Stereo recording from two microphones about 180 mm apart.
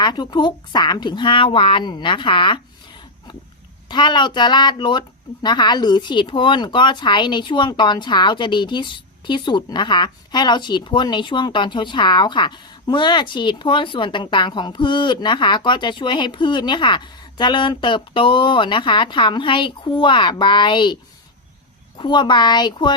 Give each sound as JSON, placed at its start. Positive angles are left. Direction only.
{"t": 0.0, "sound": "speech", "side_deg": 25}
{"t": 3.8, "sound": "speech", "side_deg": 25}